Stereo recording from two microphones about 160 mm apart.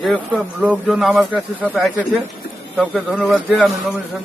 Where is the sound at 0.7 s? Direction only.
Centre (ahead or behind).